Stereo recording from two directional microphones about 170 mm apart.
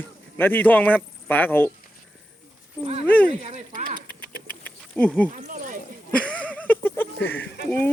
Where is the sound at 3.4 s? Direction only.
40° right (ahead or behind).